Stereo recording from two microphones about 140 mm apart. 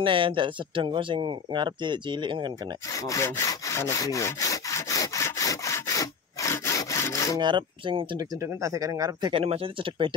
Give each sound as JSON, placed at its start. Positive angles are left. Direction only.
{"t": 0.0, "sound": "speech", "side_deg": -35}
{"t": 2.9, "sound": "sawing", "side_deg": 25}
{"t": 7.3, "sound": "speech", "side_deg": -35}
{"t": 8.2, "sound": "speech", "side_deg": -20}
{"t": 9.3, "sound": "speech", "side_deg": -45}